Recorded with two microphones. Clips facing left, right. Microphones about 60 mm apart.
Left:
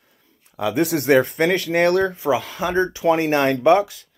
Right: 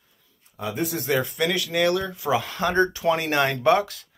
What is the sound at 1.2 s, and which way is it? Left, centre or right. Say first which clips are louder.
Speech: left 6 dB; left.